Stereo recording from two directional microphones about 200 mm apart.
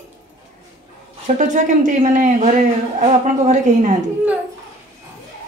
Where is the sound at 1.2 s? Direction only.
40° right (ahead or behind).